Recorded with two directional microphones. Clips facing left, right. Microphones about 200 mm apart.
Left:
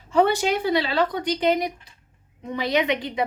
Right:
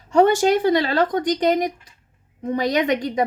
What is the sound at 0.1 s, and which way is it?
Speech, 45° right (ahead or behind).